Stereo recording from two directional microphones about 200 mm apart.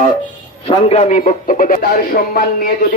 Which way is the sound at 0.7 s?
30° left (ahead or behind).